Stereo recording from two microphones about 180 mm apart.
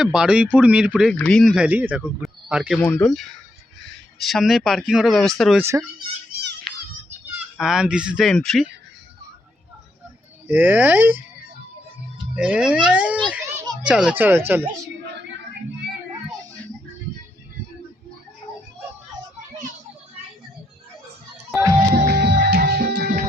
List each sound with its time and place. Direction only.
0.0 s speech: 5° right (ahead or behind)
7.6 s speech: 5° right (ahead or behind)
10.5 s speech: 10° right (ahead or behind)
12.3 s a child's voice: 5° right (ahead or behind)
21.9 s music: 65° right (ahead or behind)